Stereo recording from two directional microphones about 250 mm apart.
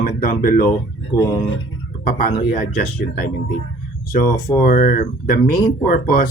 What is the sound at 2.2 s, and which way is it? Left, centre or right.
Speech, left.